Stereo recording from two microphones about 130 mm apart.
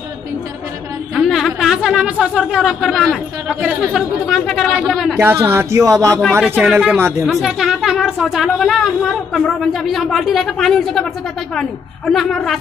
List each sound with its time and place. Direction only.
1.1 s speech: centre (ahead or behind)
5.2 s speech: 20° right (ahead or behind)
6.4 s speech: 10° right (ahead or behind)
7.2 s speech: centre (ahead or behind)
12.1 s speech: centre (ahead or behind)